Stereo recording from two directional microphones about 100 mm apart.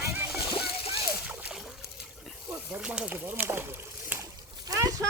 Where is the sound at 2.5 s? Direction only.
10° right (ahead or behind).